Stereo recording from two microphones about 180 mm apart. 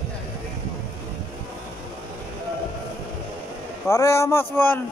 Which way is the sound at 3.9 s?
15° left (ahead or behind).